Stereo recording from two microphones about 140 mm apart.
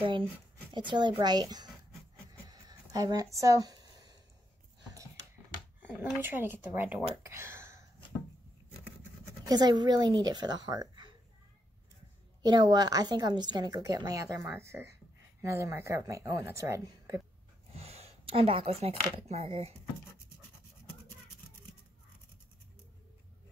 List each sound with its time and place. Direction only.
0.7 s a woman's voice: 35° right (ahead or behind)
2.4 s writing: 25° right (ahead or behind)
5.8 s speech: 10° right (ahead or behind)
9.5 s speech: 30° right (ahead or behind)
12.4 s a woman's voice: 30° right (ahead or behind)
17.7 s speech: 50° right (ahead or behind)